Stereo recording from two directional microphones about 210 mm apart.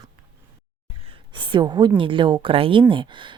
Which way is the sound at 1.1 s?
25° right (ahead or behind).